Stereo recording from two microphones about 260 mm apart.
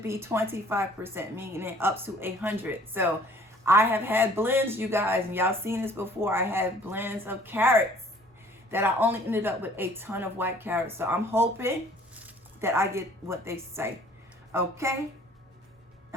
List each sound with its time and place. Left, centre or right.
0.0 s a woman's voice: centre